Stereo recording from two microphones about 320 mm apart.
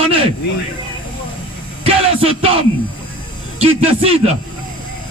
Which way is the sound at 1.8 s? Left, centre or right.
Centre.